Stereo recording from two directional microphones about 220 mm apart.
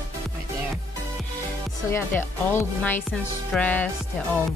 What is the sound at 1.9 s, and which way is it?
Speech, 10° left (ahead or behind).